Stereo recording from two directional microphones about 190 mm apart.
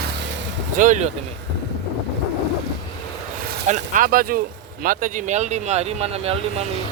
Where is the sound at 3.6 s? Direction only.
40° right (ahead or behind).